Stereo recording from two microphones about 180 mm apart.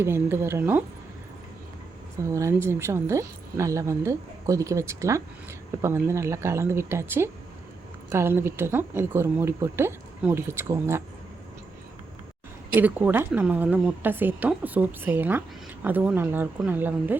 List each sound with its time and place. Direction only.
0.0 s speech: 15° right (ahead or behind)
2.1 s speech: 15° right (ahead or behind)
12.8 s speech: 10° right (ahead or behind)